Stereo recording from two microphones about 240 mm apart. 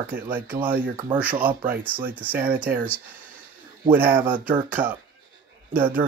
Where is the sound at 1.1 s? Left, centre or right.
Centre.